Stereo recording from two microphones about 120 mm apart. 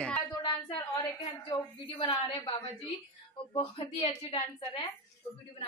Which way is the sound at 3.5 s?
55° left (ahead or behind).